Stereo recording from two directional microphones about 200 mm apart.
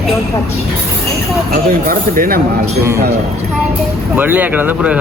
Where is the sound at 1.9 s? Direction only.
45° right (ahead or behind).